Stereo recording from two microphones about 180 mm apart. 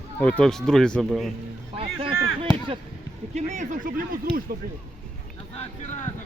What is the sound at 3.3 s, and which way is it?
Speech, 40° right (ahead or behind).